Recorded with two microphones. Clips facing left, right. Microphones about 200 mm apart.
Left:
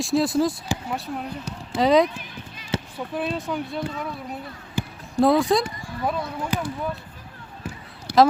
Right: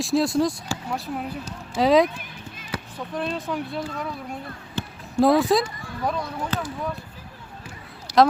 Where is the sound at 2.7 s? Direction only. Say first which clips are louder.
Left 5 dB; 25° left (ahead or behind).